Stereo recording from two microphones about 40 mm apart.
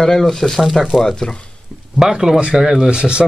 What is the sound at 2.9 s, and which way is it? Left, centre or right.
Speech, right.